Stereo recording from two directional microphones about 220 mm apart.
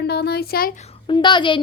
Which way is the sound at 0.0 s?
45° left (ahead or behind).